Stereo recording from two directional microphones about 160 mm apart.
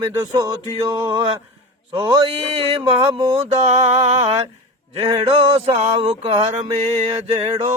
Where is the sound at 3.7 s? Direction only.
45° right (ahead or behind).